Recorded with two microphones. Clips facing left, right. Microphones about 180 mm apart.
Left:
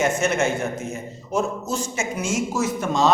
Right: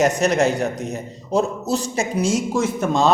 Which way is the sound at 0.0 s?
35° right (ahead or behind).